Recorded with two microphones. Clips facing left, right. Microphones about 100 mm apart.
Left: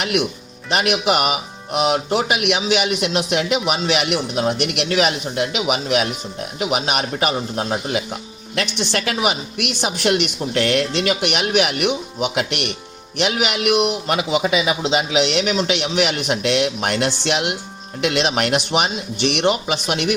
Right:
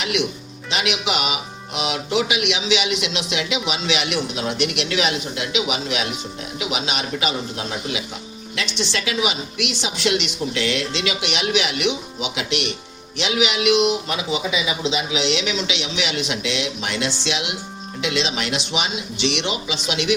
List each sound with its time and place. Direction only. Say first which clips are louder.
0.7 s a man's voice: left 5 dB; 50° left (ahead or behind)